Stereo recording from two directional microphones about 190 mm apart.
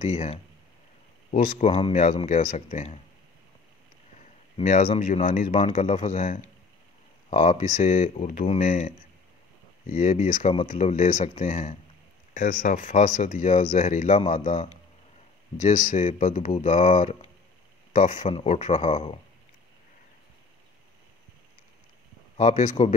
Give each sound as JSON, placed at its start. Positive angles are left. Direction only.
{"t": 0.0, "sound": "speech", "side_deg": 40}
{"t": 1.7, "sound": "speech", "side_deg": 35}
{"t": 4.6, "sound": "speech", "side_deg": 40}
{"t": 22.4, "sound": "speech", "side_deg": 40}